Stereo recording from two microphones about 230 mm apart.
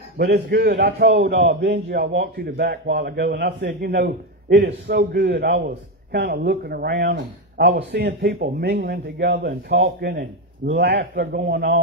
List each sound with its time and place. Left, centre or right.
0.2 s a man's voice: right